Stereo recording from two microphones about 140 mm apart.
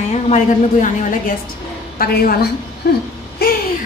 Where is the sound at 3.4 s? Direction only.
90° left.